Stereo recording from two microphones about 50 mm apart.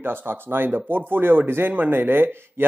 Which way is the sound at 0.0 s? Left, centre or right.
Right.